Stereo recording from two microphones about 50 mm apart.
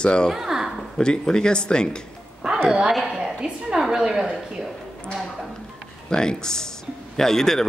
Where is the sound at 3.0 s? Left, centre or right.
Centre.